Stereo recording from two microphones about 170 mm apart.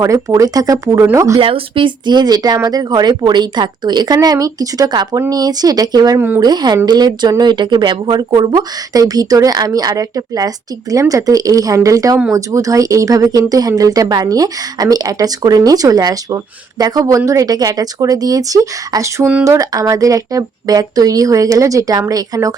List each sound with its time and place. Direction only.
0.0 s speech: 20° right (ahead or behind)
1.4 s speech: 35° right (ahead or behind)